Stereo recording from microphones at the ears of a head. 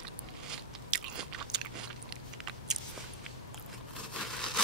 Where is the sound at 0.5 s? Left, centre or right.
Right.